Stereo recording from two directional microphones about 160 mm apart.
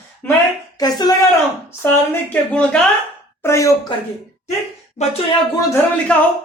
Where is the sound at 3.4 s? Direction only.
20° left (ahead or behind).